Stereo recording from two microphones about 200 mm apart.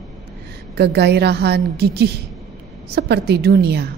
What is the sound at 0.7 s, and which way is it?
A woman's voice, 55° right (ahead or behind).